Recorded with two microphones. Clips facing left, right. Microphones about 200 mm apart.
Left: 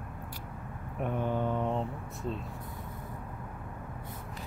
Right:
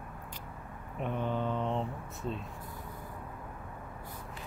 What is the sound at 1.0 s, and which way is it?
Mantra, 10° left (ahead or behind).